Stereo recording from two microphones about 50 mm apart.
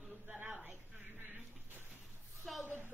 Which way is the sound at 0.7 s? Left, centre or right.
Right.